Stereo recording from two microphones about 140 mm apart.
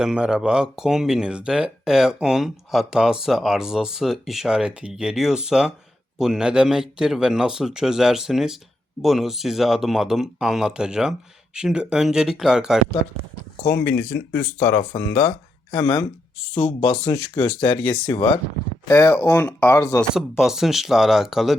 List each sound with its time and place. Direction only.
0.0 s speech: 5° right (ahead or behind)
13.7 s speech: 15° left (ahead or behind)
15.8 s speech: 40° left (ahead or behind)
18.9 s speech: 25° left (ahead or behind)
19.1 s speech: 10° left (ahead or behind)
19.7 s speech: 20° left (ahead or behind)
20.4 s speech: 5° right (ahead or behind)